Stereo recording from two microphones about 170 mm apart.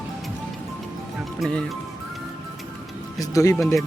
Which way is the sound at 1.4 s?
5° left (ahead or behind).